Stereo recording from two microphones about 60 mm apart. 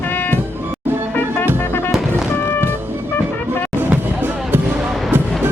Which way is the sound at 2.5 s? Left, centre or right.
Left.